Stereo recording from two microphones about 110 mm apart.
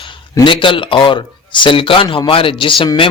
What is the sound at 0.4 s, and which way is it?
Speech, 50° left (ahead or behind).